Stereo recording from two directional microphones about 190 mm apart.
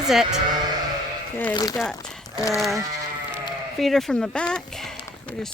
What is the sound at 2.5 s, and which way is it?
Speech, centre (ahead or behind).